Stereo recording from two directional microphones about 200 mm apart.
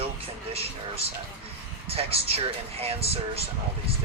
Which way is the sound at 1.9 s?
30° right (ahead or behind).